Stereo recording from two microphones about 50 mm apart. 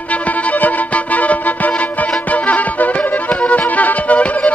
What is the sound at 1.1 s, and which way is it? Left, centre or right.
Music, left.